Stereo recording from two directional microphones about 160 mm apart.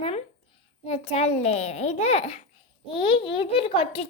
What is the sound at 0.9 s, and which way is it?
A child's voice, 40° left (ahead or behind).